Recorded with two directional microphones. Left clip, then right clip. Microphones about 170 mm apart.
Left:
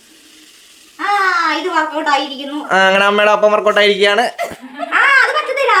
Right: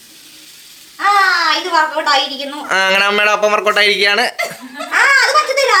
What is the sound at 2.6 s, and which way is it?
Speech, 25° left (ahead or behind).